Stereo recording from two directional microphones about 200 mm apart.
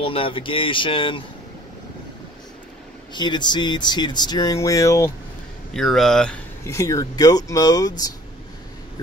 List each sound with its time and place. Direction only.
0.0 s speech: 25° left (ahead or behind)
3.1 s speech: 20° left (ahead or behind)
5.7 s speech: centre (ahead or behind)
6.6 s speech: 15° left (ahead or behind)